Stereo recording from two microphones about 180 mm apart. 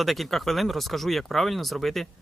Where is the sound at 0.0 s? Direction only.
Centre (ahead or behind).